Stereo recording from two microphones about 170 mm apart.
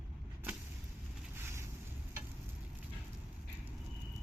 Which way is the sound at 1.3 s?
15° right (ahead or behind).